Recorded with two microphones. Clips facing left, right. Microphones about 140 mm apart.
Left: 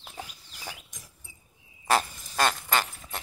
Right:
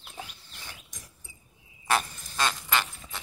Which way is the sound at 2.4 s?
45° left (ahead or behind).